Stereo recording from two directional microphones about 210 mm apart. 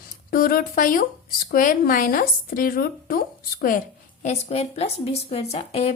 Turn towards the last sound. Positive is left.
turn(degrees=30)  # may be behind; listen again after turning